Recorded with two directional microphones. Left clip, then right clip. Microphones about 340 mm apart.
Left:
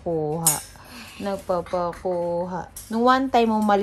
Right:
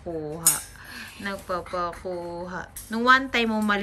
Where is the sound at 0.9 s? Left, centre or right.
Centre.